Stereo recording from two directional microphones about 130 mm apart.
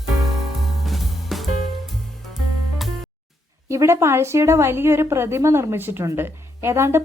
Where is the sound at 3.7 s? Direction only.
25° right (ahead or behind).